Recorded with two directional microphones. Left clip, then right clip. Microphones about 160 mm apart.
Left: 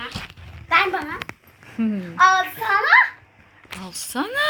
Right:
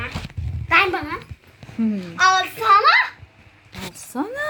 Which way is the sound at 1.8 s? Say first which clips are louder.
Right 1 dB; 10° right (ahead or behind).